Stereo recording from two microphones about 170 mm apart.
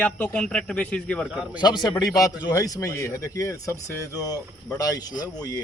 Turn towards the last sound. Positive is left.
turn(degrees=20)  # may be behind; listen again after turning